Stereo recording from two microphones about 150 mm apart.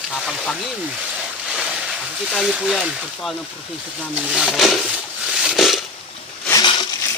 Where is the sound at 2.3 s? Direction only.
5° right (ahead or behind).